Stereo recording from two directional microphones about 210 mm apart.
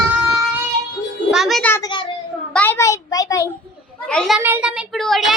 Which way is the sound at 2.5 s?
10° left (ahead or behind).